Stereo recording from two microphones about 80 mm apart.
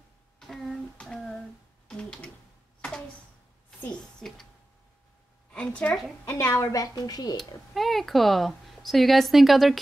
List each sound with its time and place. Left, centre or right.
0.4 s a sound: centre
4.2 s speech: centre
5.5 s a woman's voice: centre
6.4 s a woman's voice: left
7.7 s speech: centre